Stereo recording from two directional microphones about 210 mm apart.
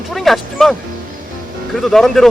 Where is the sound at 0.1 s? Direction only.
Centre (ahead or behind).